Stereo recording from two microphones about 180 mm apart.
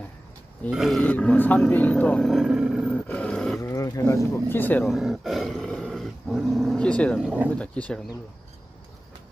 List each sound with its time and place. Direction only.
0.7 s speech: centre (ahead or behind)
2.9 s roar: 10° left (ahead or behind)
3.6 s speech: 15° left (ahead or behind)
4.9 s dog: centre (ahead or behind)
7.5 s speech: 5° left (ahead or behind)